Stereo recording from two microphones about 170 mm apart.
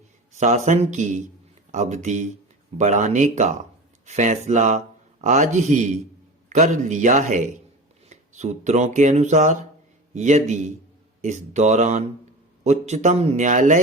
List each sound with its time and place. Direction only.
0.3 s speech: 45° right (ahead or behind)